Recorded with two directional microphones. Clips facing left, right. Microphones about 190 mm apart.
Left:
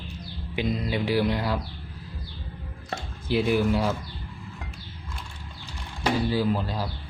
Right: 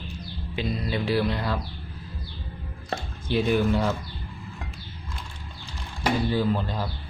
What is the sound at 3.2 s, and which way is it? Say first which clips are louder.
Speech: even; 5° left (ahead or behind).